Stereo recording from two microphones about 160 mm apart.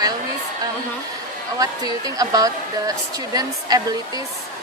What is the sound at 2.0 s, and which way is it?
A woman's voice, 20° right (ahead or behind).